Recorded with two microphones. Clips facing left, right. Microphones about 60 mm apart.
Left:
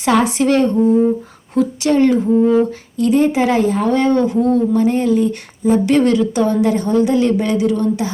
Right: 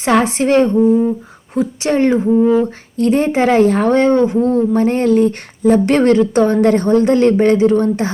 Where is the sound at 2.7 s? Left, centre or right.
Right.